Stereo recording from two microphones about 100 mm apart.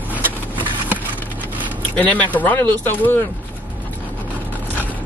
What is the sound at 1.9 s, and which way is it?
Speech, 15° left (ahead or behind).